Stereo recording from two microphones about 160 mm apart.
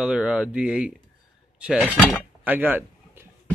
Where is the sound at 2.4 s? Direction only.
10° right (ahead or behind).